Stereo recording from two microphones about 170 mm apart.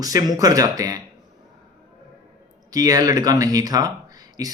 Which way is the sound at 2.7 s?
20° right (ahead or behind).